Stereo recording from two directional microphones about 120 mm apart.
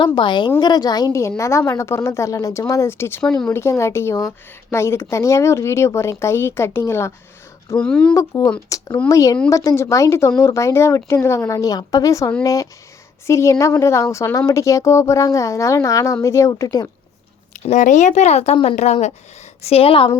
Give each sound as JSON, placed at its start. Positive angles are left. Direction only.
{"t": 0.0, "sound": "a woman's voice", "side_deg": 40}
{"t": 7.8, "sound": "speech", "side_deg": 10}
{"t": 8.1, "sound": "speech", "side_deg": 30}
{"t": 17.5, "sound": "speech", "side_deg": 90}
{"t": 18.5, "sound": "a woman's voice", "side_deg": 45}
{"t": 18.8, "sound": "speech", "side_deg": 70}
{"t": 19.6, "sound": "a woman's voice", "side_deg": 55}